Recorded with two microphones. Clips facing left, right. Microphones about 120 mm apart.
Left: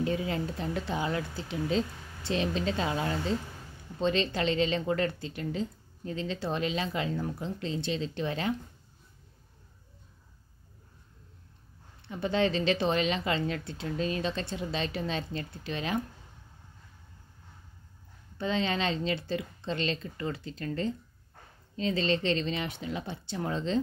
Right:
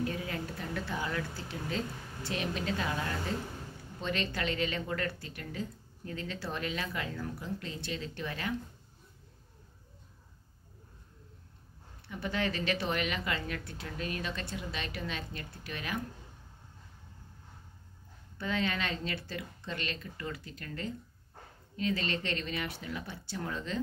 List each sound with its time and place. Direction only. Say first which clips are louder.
0.0 s speech: left 5 dB; 25° left (ahead or behind)
12.1 s speech: left 6 dB; 25° left (ahead or behind)
18.4 s speech: left 4 dB; 25° left (ahead or behind)